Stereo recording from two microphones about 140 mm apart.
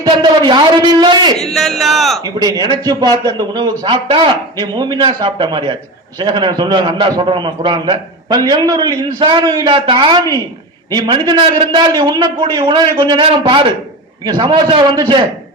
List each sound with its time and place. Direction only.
0.0 s a sound: 35° right (ahead or behind)
1.4 s speech: centre (ahead or behind)
2.2 s a man's voice: 30° right (ahead or behind)